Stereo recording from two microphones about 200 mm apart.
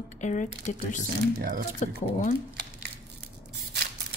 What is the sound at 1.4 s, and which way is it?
Speech, 50° right (ahead or behind).